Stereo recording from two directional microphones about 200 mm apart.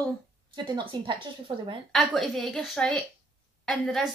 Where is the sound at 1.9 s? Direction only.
Centre (ahead or behind).